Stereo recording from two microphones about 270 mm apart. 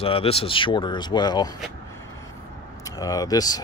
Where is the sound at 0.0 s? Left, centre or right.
Left.